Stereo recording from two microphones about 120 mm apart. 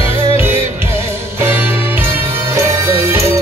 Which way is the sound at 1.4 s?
15° right (ahead or behind).